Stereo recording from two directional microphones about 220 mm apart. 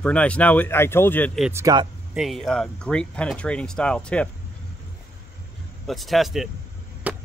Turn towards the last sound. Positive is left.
turn(degrees=-5)  # may be behind; listen again after turning